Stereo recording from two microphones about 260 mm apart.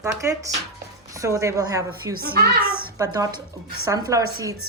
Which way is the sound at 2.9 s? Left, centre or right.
Centre.